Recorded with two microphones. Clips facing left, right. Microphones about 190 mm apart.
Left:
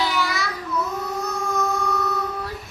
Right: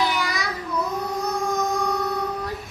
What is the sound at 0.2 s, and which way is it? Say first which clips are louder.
Child singing: left 2 dB; 15° right (ahead or behind).